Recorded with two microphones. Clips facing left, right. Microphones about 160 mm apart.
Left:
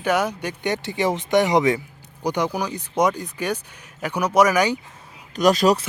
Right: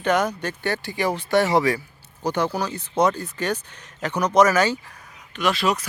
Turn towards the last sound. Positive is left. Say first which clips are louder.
# left 6 dB
turn(degrees=40)  # may be behind; listen again after turning